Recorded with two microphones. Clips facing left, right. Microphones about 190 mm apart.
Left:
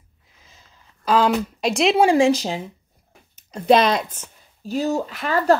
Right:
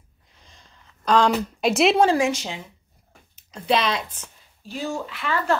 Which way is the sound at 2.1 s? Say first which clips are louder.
Left 6 dB; 35° left (ahead or behind).